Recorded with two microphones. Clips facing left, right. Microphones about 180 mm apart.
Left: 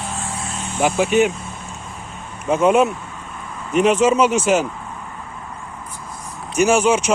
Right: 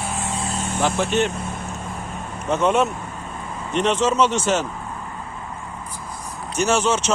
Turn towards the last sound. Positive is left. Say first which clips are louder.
# left 4 dB
turn(degrees=10)  # may be behind; listen again after turning